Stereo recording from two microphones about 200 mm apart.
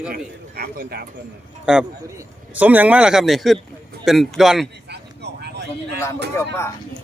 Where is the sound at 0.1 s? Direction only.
50° right (ahead or behind).